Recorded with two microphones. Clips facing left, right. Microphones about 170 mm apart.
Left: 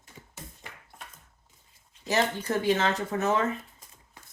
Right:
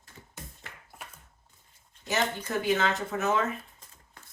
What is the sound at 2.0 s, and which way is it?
Speech, 35° left (ahead or behind).